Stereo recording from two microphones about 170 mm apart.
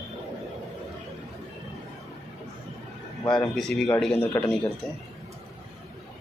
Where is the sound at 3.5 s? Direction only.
5° left (ahead or behind).